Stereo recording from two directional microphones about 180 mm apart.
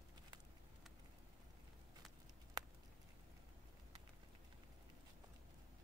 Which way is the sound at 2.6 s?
20° right (ahead or behind).